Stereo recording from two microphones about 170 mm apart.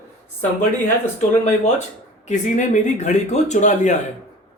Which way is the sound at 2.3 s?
45° left (ahead or behind).